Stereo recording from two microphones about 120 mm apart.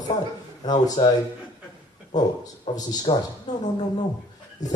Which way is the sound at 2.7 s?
35° left (ahead or behind).